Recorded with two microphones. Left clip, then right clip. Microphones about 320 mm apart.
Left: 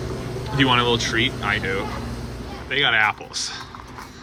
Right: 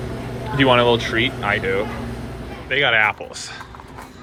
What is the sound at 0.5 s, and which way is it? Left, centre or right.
Speech, centre.